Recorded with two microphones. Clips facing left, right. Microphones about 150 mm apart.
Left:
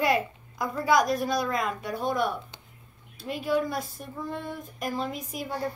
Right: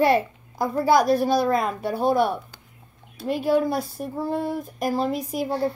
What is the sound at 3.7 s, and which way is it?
Child singing, 35° right (ahead or behind).